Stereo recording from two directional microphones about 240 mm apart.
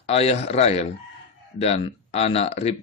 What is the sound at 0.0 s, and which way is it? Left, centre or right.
Speech, left.